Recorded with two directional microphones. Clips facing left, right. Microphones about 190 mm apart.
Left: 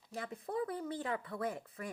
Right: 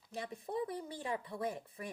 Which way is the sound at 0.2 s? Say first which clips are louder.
Left 1 dB; 20° right (ahead or behind).